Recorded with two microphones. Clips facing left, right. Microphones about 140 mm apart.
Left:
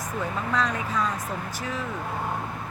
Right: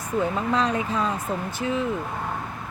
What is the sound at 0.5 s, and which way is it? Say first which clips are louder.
Speech: even; 30° right (ahead or behind).